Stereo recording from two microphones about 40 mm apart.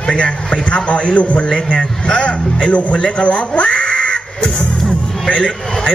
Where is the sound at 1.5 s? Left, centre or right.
Centre.